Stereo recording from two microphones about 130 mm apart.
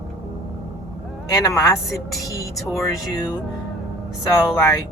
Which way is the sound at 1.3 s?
25° left (ahead or behind).